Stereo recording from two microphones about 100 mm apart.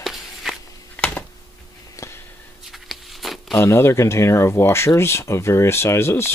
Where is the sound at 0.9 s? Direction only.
15° left (ahead or behind).